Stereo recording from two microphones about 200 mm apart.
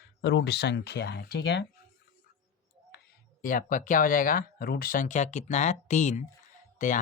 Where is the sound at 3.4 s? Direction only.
40° left (ahead or behind).